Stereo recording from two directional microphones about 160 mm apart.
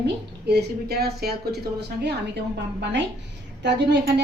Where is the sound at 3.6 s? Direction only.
90° right.